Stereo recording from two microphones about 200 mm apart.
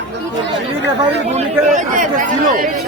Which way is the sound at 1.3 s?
35° right (ahead or behind).